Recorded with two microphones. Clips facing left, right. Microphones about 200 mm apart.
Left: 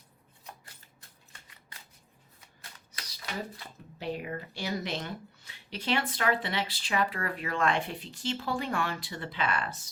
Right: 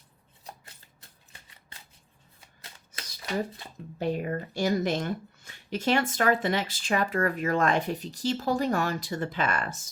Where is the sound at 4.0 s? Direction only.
45° right (ahead or behind).